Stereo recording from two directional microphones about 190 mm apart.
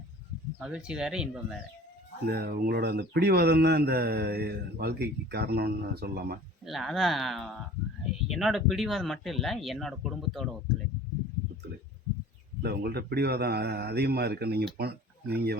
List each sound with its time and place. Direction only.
0.6 s speech: 5° right (ahead or behind)
2.2 s speech: 55° right (ahead or behind)
6.7 s speech: centre (ahead or behind)
12.6 s speech: 55° right (ahead or behind)